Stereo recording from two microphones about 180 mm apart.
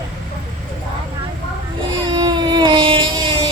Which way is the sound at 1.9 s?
25° right (ahead or behind).